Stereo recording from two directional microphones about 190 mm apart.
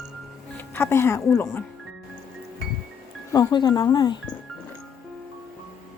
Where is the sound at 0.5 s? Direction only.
10° left (ahead or behind).